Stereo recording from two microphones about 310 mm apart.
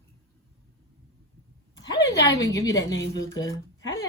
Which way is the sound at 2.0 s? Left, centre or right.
Left.